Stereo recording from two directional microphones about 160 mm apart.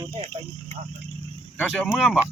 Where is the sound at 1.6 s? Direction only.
Centre (ahead or behind).